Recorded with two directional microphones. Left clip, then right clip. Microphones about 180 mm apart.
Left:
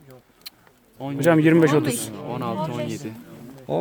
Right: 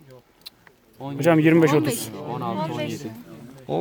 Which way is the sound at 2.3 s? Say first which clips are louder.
Even; 20° left (ahead or behind).